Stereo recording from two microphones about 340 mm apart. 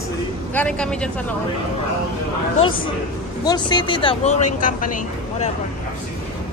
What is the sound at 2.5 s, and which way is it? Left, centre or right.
Speech, centre.